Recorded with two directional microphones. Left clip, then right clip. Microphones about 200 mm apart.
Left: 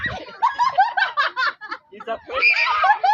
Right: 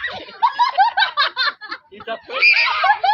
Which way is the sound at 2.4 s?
30° left (ahead or behind).